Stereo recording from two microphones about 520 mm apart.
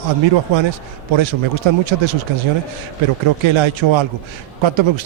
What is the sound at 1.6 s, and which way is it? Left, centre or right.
Speech, right.